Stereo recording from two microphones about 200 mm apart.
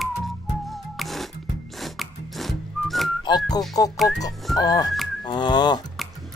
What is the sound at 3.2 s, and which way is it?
Speech, 20° left (ahead or behind).